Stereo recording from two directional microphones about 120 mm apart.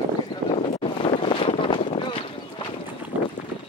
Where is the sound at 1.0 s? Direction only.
50° left (ahead or behind).